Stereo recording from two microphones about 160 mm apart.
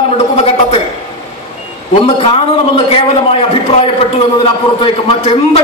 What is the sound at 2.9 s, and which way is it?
A man's voice, 35° left (ahead or behind).